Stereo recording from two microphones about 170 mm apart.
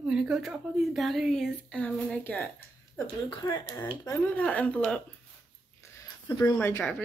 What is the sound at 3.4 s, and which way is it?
Speech, 25° left (ahead or behind).